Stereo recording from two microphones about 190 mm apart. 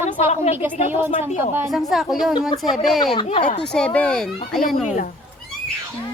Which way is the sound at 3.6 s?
5° left (ahead or behind).